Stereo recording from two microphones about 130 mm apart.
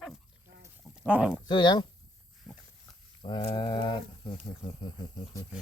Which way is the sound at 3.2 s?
40° left (ahead or behind).